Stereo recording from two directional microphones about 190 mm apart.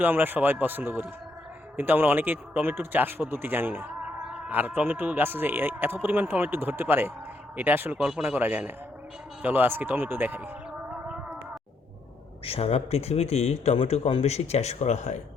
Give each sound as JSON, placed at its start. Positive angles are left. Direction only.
{"t": 0.0, "sound": "speech", "side_deg": -10}
{"t": 9.4, "sound": "a sound", "side_deg": -10}
{"t": 12.5, "sound": "speech", "side_deg": 30}